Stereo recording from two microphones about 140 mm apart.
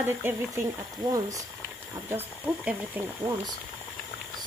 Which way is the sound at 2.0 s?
10° right (ahead or behind).